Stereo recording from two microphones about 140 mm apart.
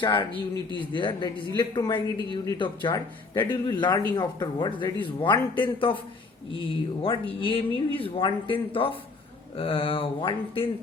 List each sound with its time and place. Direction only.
0.0 s speech: 35° left (ahead or behind)
7.0 s speech: 40° left (ahead or behind)